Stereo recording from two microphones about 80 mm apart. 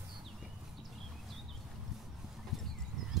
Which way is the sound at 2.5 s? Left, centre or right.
Centre.